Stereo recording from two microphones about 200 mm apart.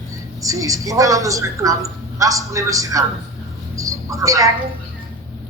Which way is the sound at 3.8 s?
15° right (ahead or behind).